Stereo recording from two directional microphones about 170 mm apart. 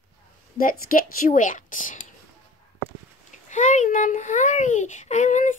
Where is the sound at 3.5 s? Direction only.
45° left (ahead or behind).